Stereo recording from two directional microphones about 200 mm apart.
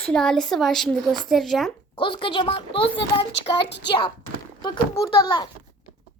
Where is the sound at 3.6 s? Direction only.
60° left (ahead or behind).